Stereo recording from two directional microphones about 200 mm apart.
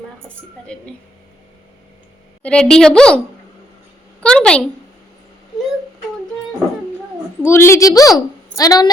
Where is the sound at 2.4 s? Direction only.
5° left (ahead or behind).